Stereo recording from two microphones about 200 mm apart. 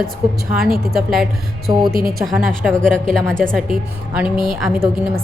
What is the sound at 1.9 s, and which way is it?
Speech, 45° right (ahead or behind).